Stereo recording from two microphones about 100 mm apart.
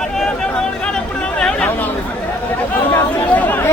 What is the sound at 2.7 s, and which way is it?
Chatter, 20° left (ahead or behind).